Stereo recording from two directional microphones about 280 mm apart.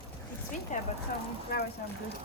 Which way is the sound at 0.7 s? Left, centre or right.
Left.